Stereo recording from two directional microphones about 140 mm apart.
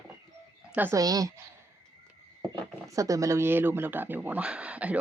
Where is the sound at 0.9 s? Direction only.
25° right (ahead or behind).